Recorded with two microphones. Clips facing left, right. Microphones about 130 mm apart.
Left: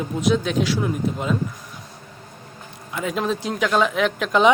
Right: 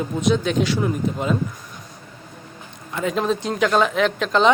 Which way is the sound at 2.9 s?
5° left (ahead or behind).